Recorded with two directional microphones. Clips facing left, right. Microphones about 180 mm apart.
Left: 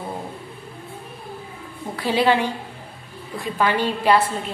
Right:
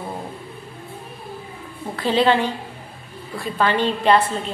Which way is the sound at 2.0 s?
10° left (ahead or behind).